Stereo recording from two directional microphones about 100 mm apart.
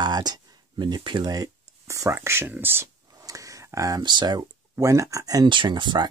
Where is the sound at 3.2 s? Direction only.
35° right (ahead or behind).